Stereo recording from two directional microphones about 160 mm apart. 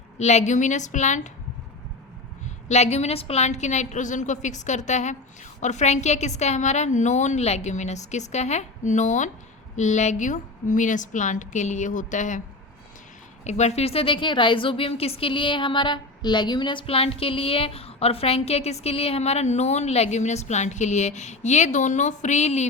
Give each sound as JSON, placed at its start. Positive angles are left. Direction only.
{"t": 0.2, "sound": "a woman's voice", "side_deg": 45}
{"t": 2.6, "sound": "a woman's voice", "side_deg": 45}
{"t": 13.4, "sound": "a woman's voice", "side_deg": 45}